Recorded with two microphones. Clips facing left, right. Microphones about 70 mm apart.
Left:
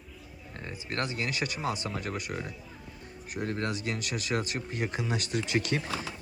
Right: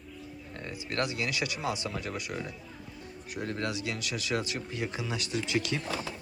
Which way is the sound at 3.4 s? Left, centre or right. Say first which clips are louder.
Left 1 dB; left.